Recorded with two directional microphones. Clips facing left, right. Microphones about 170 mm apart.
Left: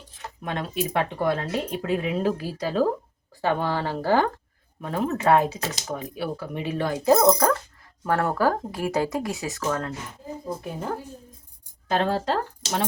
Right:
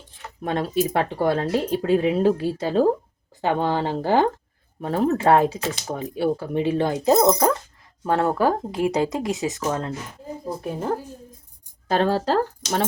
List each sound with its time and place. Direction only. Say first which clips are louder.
0.4 s speech: right 6 dB; 35° right (ahead or behind)
4.8 s speech: right 5 dB; 35° right (ahead or behind)
10.6 s speech: right 5 dB; 35° right (ahead or behind)